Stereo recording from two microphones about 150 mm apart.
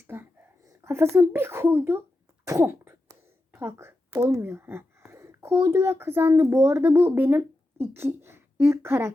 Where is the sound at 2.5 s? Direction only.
15° right (ahead or behind).